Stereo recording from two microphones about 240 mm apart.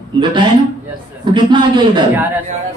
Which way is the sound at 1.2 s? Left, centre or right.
Centre.